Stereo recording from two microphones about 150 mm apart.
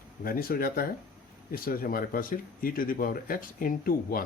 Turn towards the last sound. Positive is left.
turn(degrees=75)  # may be behind; listen again after turning